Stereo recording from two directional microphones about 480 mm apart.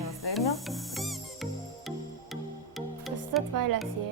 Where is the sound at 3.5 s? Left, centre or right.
Right.